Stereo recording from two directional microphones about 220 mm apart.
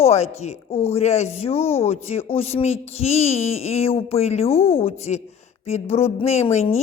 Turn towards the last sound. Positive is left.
turn(degrees=30)  # may be behind; listen again after turning